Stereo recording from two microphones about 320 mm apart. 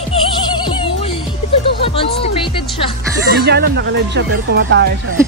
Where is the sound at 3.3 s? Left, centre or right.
Right.